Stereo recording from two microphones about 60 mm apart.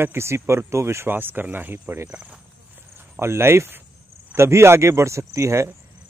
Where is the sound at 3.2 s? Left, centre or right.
Right.